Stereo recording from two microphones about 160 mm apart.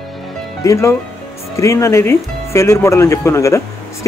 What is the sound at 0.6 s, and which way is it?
Speech, 20° left (ahead or behind).